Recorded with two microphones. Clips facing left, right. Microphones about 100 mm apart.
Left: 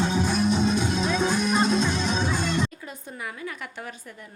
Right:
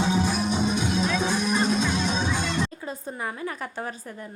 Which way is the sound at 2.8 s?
35° right (ahead or behind).